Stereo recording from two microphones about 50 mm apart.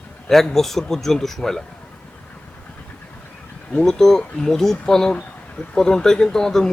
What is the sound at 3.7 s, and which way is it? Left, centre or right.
Speech, centre.